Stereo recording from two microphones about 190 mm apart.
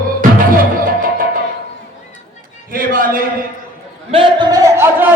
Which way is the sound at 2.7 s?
50° right (ahead or behind).